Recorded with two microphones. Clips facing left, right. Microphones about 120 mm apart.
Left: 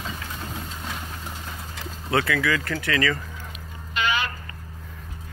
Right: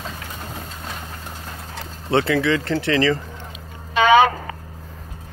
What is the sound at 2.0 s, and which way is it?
Speech, 30° right (ahead or behind).